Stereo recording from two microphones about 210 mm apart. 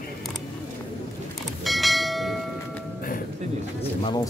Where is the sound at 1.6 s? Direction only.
Centre (ahead or behind).